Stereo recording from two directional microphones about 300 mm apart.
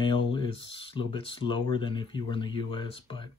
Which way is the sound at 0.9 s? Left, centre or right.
Centre.